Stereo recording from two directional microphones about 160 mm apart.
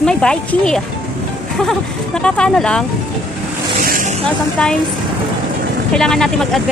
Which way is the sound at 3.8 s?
55° right (ahead or behind).